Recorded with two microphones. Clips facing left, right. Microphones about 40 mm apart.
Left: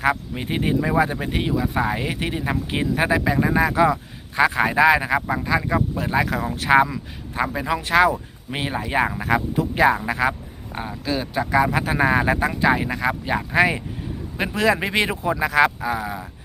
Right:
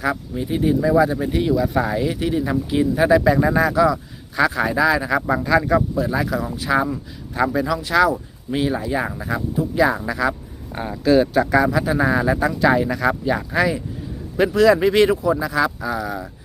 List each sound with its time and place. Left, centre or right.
0.0 s speech: left
1.5 s speech: left
3.2 s speech: centre
3.7 s speech: left
5.4 s speech: centre
6.0 s speech: left
7.3 s speech: left
9.1 s speech: left
9.8 s speech: left
10.8 s speech: centre
11.7 s speech: left
12.4 s speech: left
15.2 s speech: left
15.8 s speech: left